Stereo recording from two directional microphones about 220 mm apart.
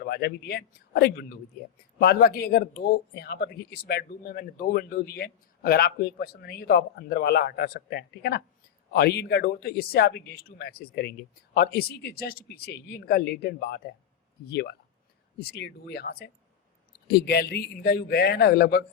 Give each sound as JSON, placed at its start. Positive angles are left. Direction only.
{"t": 0.0, "sound": "speech", "side_deg": 45}